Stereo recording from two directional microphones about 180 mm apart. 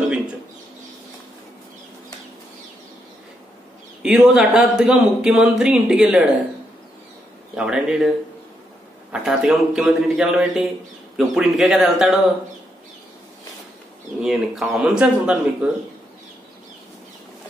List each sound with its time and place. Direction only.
4.0 s speech: 5° right (ahead or behind)
7.5 s speech: 5° right (ahead or behind)
9.1 s speech: 5° right (ahead or behind)
14.2 s speech: centre (ahead or behind)